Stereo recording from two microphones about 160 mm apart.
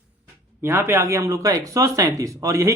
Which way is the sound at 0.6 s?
15° right (ahead or behind).